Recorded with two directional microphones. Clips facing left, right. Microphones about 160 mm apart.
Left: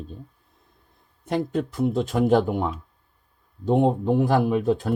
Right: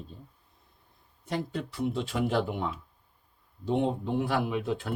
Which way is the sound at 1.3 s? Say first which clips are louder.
Left 8 dB; 50° left (ahead or behind).